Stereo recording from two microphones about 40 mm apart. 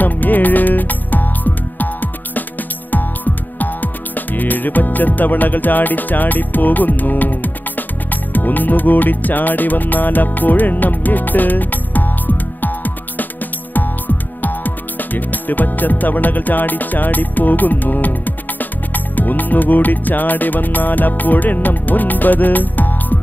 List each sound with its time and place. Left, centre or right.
0.0 s music: left
3.5 s music: left